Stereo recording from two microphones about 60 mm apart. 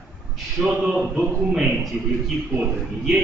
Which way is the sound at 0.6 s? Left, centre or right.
Centre.